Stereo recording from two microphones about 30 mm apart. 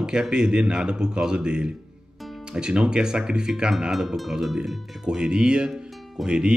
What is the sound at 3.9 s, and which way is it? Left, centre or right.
Speech, centre.